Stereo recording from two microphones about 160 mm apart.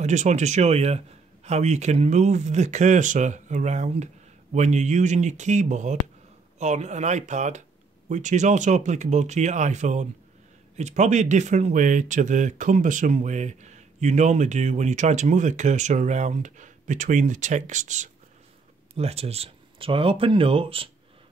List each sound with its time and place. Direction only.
0.0 s speech: 45° right (ahead or behind)